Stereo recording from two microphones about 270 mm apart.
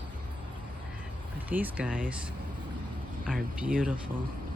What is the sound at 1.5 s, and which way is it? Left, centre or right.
Speech, centre.